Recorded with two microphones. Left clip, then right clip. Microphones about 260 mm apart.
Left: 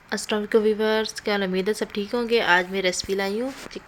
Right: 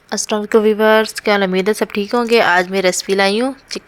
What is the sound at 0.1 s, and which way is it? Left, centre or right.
A woman's voice, centre.